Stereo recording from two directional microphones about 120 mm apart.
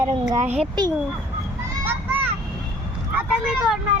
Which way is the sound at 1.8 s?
15° right (ahead or behind).